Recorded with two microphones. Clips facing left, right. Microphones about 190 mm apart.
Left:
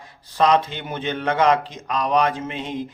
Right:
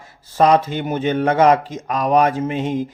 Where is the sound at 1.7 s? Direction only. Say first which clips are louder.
Right 4 dB; 50° right (ahead or behind).